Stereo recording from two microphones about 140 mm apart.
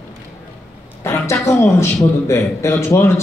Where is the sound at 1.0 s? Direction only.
20° left (ahead or behind).